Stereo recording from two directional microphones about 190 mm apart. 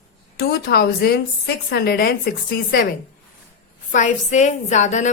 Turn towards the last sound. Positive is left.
turn(degrees=40)  # may be behind; listen again after turning